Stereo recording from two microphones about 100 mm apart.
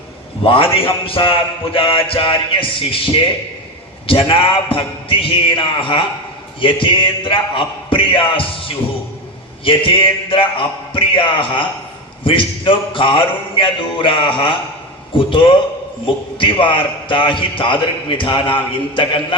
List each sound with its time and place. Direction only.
0.4 s a man's voice: 65° left (ahead or behind)